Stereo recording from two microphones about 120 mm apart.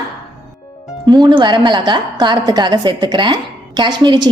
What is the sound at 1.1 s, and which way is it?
A woman's voice, 40° right (ahead or behind).